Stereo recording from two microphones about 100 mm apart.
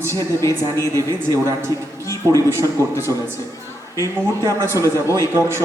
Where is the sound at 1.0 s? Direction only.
35° right (ahead or behind).